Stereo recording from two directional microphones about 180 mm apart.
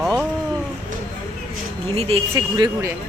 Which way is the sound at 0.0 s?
5° right (ahead or behind).